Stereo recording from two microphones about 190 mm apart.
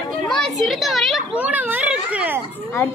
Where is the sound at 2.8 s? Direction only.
10° left (ahead or behind).